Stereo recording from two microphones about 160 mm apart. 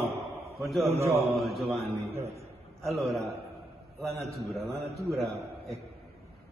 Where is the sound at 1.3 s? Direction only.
Centre (ahead or behind).